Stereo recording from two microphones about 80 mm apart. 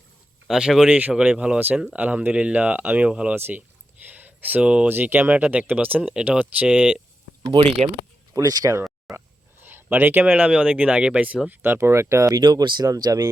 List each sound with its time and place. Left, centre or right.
0.4 s speech: centre
0.9 s speech: centre
3.3 s speech: right
4.1 s a sound: right
4.9 s speech: right
7.6 s speech: right
8.3 s speech: right
9.1 s a sound: centre
9.6 s speech: right
12.3 s speech: right
12.9 s speech: right